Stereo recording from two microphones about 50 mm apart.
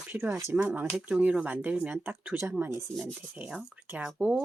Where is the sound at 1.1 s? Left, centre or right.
Right.